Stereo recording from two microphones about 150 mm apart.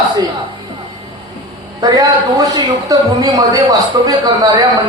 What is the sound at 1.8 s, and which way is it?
A man's voice, 25° right (ahead or behind).